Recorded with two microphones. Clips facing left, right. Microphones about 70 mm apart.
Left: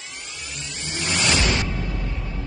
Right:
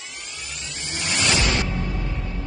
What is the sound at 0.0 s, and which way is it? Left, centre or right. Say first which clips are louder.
Vehicle: even; centre.